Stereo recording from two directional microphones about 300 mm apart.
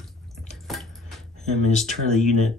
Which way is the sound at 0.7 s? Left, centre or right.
Centre.